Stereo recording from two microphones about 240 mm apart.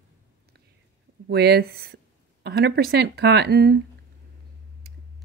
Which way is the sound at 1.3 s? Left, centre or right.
Right.